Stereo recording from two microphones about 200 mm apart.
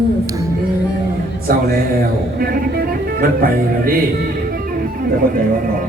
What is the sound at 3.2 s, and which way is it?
Music, 45° right (ahead or behind).